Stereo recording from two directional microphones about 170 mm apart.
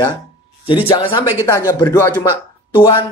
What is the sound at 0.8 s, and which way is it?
Speech, 30° left (ahead or behind).